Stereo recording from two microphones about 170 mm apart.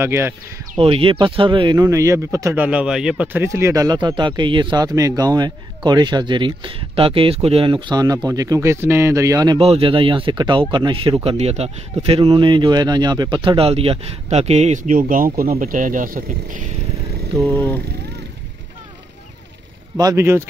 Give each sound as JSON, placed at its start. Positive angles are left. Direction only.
{"t": 0.0, "sound": "speech", "side_deg": -15}
{"t": 0.7, "sound": "speech", "side_deg": -30}
{"t": 3.4, "sound": "speech", "side_deg": -15}
{"t": 9.6, "sound": "speech", "side_deg": -35}
{"t": 17.6, "sound": "speech", "side_deg": 10}
{"t": 20.0, "sound": "speech", "side_deg": -20}